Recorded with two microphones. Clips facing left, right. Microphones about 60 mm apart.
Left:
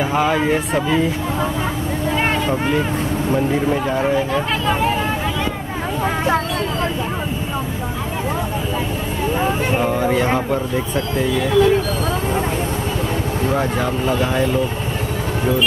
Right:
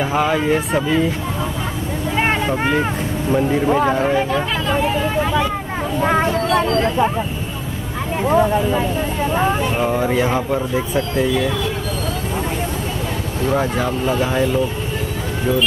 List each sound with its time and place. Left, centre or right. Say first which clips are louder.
0.0 s speech: even; centre
2.1 s vehicle: right 2 dB; centre
2.6 s speech: right 1 dB; right
3.9 s speech: right 1 dB; centre
9.8 s speech: even; centre
13.5 s speech: right 2 dB; centre